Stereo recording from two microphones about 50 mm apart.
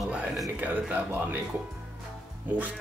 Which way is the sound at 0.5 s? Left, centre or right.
Right.